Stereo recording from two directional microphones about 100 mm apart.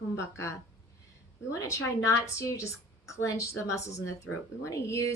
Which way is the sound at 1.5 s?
35° left (ahead or behind).